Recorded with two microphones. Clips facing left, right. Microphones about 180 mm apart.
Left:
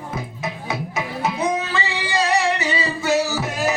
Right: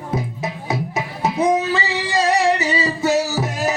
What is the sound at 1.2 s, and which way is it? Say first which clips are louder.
Female singing: right 6 dB; 40° right (ahead or behind).